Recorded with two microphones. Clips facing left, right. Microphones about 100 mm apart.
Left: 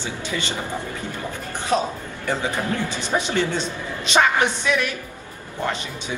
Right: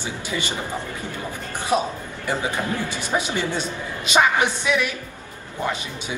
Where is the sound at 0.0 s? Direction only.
15° right (ahead or behind).